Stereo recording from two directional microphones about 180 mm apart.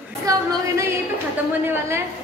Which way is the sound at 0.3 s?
20° right (ahead or behind).